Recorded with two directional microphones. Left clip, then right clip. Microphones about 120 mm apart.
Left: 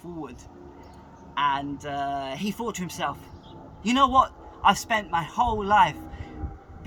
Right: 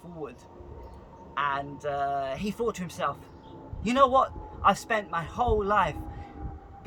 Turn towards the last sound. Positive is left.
turn(degrees=-30)  # may be behind; listen again after turning